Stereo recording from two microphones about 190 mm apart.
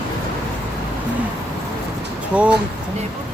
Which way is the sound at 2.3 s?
5° right (ahead or behind).